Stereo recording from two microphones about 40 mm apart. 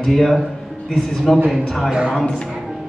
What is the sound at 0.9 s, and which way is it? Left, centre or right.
Speech, centre.